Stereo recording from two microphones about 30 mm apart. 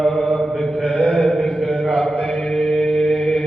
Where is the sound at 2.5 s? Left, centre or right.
Left.